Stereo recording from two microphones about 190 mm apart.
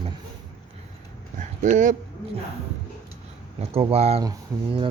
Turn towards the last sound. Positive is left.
turn(degrees=-25)  # may be behind; listen again after turning